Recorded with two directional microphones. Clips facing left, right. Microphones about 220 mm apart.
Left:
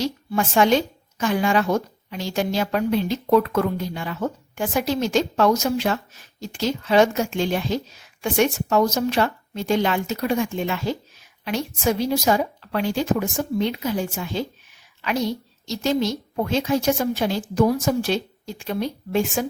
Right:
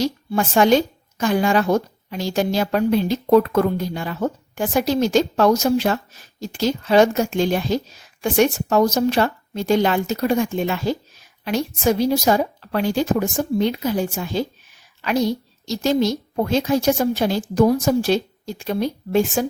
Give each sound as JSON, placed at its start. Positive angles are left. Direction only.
{"t": 0.0, "sound": "a woman's voice", "side_deg": -35}